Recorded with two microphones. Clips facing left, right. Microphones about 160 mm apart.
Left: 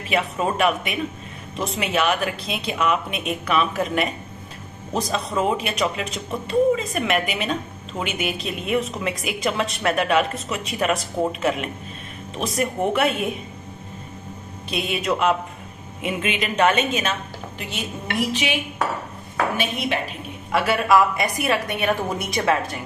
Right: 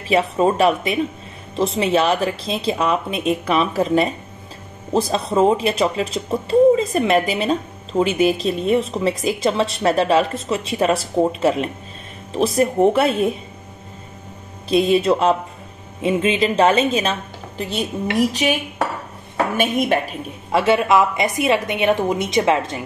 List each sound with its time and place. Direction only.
0.1 s a woman's voice: 35° right (ahead or behind)
14.7 s a woman's voice: 35° right (ahead or behind)
20.5 s a woman's voice: 25° right (ahead or behind)